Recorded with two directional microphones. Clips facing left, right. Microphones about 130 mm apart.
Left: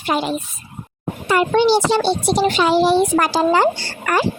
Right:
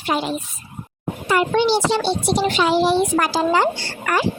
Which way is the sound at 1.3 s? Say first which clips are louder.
Left 3 dB; 45° left (ahead or behind).